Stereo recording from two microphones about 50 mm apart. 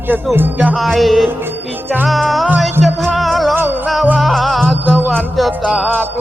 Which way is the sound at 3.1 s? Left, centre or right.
Centre.